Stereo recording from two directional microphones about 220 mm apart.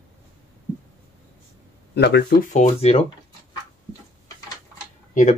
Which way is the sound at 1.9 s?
50° left (ahead or behind).